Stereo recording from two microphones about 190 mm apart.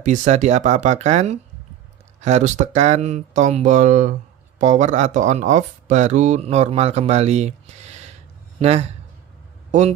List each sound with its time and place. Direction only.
0.0 s speech: 40° right (ahead or behind)